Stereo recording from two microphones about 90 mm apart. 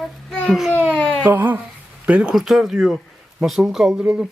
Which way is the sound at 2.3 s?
Centre (ahead or behind).